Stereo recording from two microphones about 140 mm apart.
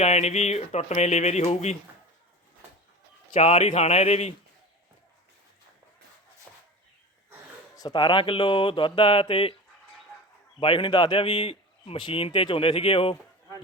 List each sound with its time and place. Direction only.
0.0 s speech: 50° left (ahead or behind)
3.3 s speech: 55° left (ahead or behind)
6.5 s a sound: centre (ahead or behind)
7.8 s a man's voice: 30° left (ahead or behind)
10.6 s a man's voice: 40° left (ahead or behind)